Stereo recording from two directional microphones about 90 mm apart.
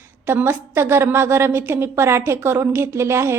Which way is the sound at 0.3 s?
25° right (ahead or behind).